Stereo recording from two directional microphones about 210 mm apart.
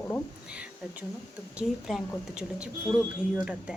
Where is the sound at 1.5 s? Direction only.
5° right (ahead or behind).